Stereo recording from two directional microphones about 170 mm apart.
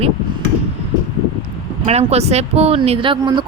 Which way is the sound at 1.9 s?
40° right (ahead or behind).